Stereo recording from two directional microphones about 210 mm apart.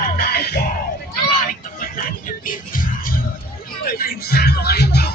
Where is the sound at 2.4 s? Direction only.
40° left (ahead or behind).